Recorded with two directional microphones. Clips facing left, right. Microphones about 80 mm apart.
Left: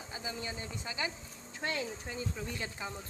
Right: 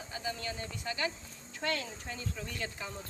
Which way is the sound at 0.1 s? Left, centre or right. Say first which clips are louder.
Right 2 dB; centre.